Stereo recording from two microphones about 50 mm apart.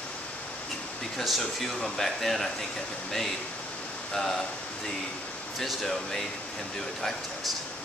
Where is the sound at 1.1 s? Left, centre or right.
Centre.